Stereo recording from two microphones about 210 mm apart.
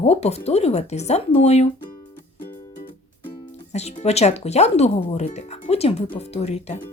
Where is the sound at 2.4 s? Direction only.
40° left (ahead or behind).